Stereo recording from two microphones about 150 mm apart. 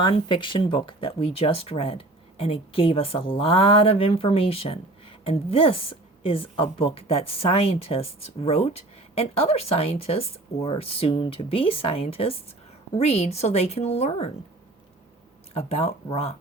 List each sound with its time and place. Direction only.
0.0 s a woman's voice: 30° left (ahead or behind)
15.5 s a woman's voice: 40° left (ahead or behind)